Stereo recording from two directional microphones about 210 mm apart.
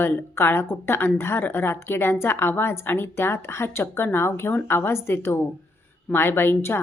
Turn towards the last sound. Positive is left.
turn(degrees=10)  # may be behind; listen again after turning